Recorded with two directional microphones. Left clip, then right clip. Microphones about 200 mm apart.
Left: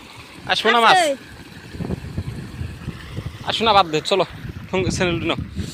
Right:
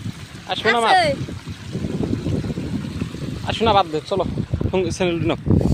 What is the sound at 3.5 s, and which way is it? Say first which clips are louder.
Speech: left 1 dB; 20° right (ahead or behind).